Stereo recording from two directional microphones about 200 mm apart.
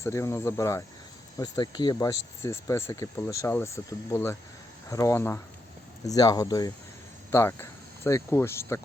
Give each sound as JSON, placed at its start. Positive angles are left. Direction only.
{"t": 0.0, "sound": "speech", "side_deg": 15}